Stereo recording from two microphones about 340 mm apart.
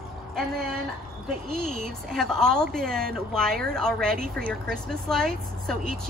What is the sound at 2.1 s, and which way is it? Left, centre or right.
Speech, centre.